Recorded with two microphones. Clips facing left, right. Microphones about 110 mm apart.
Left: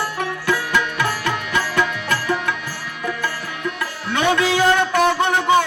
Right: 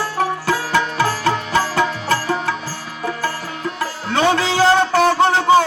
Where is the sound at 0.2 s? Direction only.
35° right (ahead or behind).